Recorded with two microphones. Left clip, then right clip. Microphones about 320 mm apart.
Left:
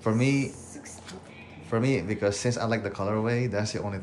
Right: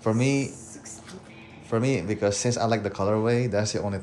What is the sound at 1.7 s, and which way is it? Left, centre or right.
Speech, centre.